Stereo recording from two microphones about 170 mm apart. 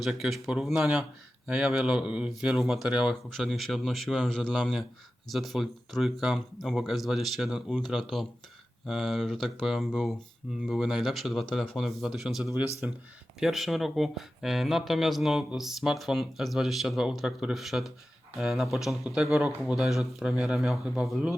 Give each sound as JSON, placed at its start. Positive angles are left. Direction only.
{"t": 0.0, "sound": "speech", "side_deg": 0}